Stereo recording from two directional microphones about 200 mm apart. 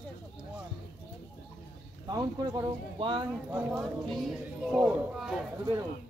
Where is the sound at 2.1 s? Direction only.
20° right (ahead or behind).